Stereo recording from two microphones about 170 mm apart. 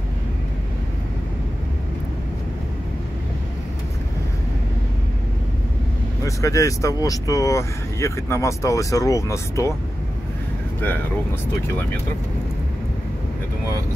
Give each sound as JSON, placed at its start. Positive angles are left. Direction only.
{"t": 6.2, "sound": "speech", "side_deg": 20}